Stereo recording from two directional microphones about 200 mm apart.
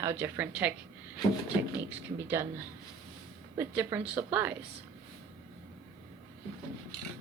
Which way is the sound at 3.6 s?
10° right (ahead or behind).